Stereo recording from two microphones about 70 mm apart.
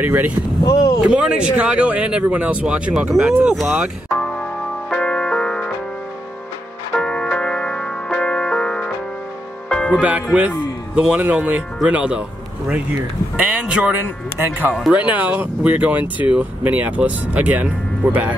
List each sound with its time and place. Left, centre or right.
0.0 s speech: right
0.7 s speech: left
1.0 s speech: centre
4.2 s music: centre
7.0 s music: centre
9.9 s a man's voice: right